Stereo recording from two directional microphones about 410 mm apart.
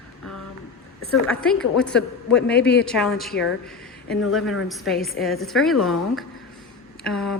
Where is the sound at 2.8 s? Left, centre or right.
Centre.